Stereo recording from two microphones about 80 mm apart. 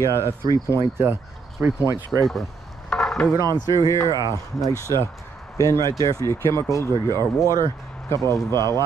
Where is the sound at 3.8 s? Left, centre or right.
Left.